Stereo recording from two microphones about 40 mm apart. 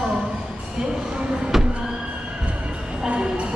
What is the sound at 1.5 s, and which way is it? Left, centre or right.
Neigh, centre.